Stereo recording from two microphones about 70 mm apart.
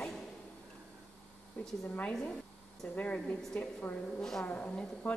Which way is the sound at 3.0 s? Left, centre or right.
Centre.